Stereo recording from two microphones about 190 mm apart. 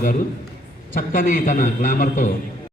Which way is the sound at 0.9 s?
45° left (ahead or behind).